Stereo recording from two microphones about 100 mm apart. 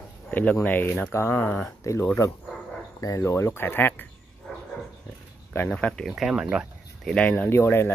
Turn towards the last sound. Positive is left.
turn(degrees=25)  # may be behind; listen again after turning